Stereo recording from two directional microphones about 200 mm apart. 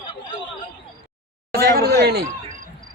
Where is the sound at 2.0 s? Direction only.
55° right (ahead or behind).